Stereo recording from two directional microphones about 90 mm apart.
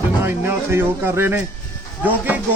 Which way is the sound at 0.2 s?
25° right (ahead or behind).